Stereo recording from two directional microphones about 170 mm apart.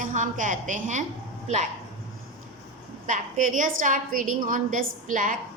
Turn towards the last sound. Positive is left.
turn(degrees=-50)  # may be behind; listen again after turning